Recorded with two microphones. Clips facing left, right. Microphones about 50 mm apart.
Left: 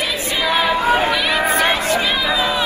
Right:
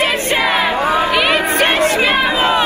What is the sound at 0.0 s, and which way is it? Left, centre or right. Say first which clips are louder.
Chatter: right 5 dB; right.